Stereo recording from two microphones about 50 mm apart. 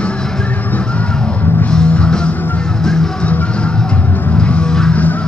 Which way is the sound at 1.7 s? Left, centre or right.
Centre.